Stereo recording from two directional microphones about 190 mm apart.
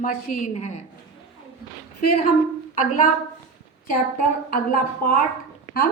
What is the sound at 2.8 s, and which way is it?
Speech, 45° left (ahead or behind).